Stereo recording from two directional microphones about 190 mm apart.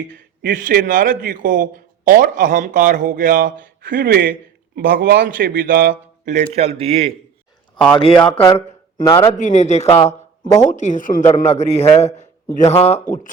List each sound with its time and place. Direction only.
0.1 s a man's voice: 45° right (ahead or behind)
7.9 s a man's voice: 25° left (ahead or behind)